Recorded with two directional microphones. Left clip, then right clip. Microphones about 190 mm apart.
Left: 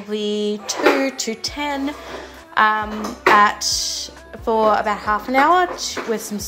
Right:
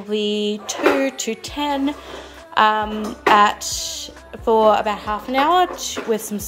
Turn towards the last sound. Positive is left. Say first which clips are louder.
# right 1 dB
turn(degrees=-15)  # may be behind; listen again after turning